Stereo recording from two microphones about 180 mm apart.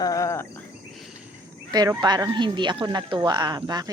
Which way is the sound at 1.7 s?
20° right (ahead or behind).